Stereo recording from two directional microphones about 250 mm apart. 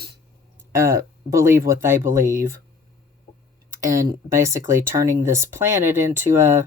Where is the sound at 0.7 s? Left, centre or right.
Centre.